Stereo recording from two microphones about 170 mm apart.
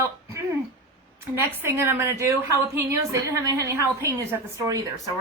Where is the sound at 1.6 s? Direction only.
15° right (ahead or behind).